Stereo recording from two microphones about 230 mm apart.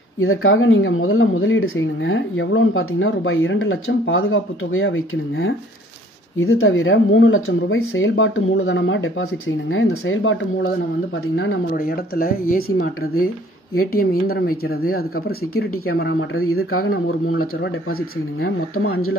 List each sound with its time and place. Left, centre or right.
0.2 s speech: left
11.7 s speech: left
13.7 s speech: left
16.0 s speech: left